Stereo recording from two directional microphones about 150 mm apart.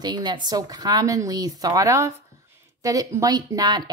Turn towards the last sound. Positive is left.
turn(degrees=-30)  # may be behind; listen again after turning